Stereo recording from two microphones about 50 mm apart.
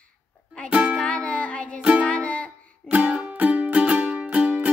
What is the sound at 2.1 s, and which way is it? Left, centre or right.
Music, left.